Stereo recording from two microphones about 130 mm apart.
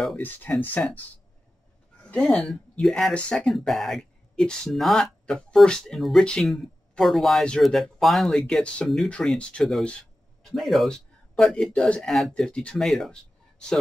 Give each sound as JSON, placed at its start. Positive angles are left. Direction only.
{"t": 0.2, "sound": "speech", "side_deg": 15}
{"t": 2.0, "sound": "a man's voice", "side_deg": 5}